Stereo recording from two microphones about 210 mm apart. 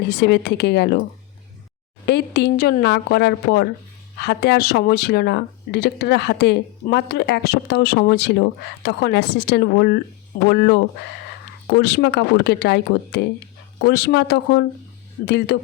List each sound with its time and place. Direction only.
0.0 s speech: 50° left (ahead or behind)
2.0 s speech: 50° left (ahead or behind)